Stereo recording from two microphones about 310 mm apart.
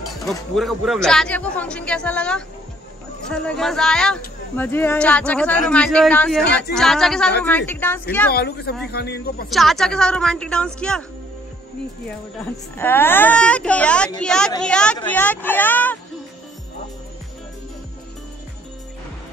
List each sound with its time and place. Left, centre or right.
0.3 s speech: centre
8.3 s speech: left
9.5 s speech: centre
12.4 s speech: centre